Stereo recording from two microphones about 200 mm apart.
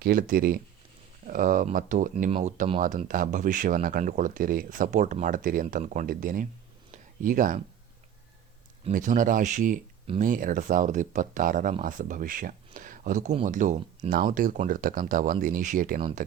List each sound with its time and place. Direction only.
0.0 s speech: 45° right (ahead or behind)
6.9 s a sound: 40° right (ahead or behind)
8.8 s speech: 40° right (ahead or behind)